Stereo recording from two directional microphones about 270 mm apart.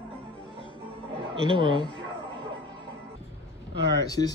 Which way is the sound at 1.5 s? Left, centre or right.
Centre.